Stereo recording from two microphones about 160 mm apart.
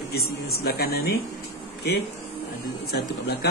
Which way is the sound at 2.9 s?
90° left.